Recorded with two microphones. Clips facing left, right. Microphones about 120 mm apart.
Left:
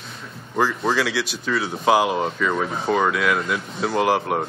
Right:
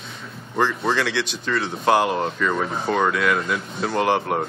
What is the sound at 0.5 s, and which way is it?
Speech, 5° left (ahead or behind).